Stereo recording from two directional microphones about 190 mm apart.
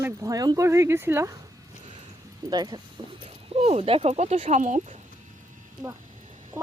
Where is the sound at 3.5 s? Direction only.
35° right (ahead or behind).